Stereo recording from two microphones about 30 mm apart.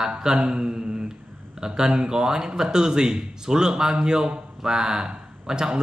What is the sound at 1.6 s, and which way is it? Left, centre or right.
A man's voice, centre.